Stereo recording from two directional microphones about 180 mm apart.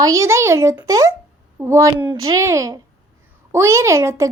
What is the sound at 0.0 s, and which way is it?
A woman's voice, 15° right (ahead or behind).